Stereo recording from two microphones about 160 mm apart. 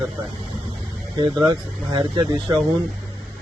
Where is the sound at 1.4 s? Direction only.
25° right (ahead or behind).